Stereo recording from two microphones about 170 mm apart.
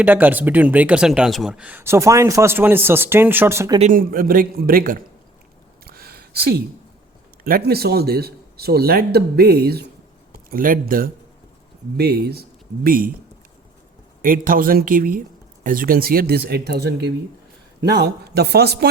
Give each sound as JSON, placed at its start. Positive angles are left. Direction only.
{"t": 0.0, "sound": "speech", "side_deg": -10}
{"t": 3.8, "sound": "speech", "side_deg": -50}
{"t": 5.8, "sound": "a sound", "side_deg": -60}
{"t": 7.4, "sound": "speech", "side_deg": -65}
{"t": 11.9, "sound": "speech", "side_deg": -65}
{"t": 14.2, "sound": "speech", "side_deg": -55}